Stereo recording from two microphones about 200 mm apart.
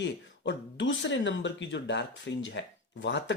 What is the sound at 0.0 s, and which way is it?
Speech, 65° left (ahead or behind).